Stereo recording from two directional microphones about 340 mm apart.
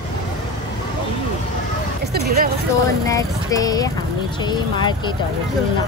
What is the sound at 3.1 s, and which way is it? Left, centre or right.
Speech, centre.